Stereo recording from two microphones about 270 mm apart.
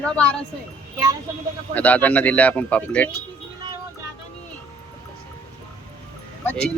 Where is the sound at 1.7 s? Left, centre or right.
Centre.